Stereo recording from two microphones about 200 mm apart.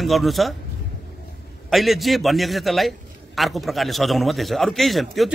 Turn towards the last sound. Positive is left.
turn(degrees=0)  # may be behind; listen again after turning